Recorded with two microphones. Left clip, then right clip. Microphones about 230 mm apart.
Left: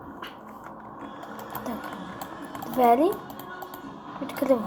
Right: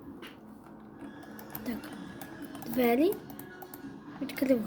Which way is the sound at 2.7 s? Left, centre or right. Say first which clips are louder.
Left 7 dB; right.